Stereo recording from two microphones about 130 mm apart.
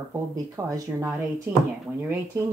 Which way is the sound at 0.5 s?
25° right (ahead or behind).